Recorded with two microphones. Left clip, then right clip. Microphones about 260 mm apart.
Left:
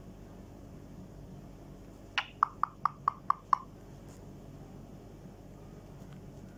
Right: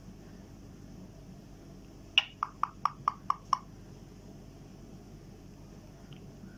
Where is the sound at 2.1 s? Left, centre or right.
Centre.